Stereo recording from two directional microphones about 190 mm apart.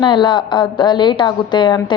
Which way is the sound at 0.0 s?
25° left (ahead or behind).